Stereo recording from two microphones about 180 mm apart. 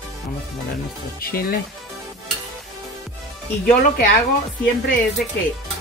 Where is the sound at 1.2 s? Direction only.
55° left (ahead or behind).